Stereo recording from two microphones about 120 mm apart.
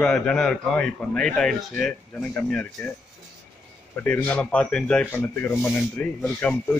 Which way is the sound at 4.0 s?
15° left (ahead or behind).